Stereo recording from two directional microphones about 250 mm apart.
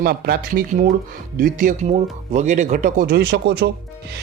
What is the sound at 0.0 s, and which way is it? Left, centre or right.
Speech, right.